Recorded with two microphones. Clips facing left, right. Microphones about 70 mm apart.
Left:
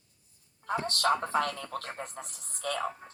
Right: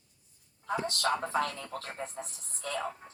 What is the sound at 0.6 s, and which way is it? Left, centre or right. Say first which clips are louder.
A man's voice: left 3 dB; left.